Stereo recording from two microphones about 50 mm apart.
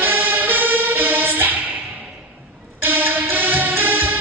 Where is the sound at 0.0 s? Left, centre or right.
Right.